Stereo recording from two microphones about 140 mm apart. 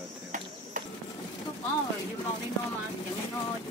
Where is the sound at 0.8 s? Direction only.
70° right (ahead or behind).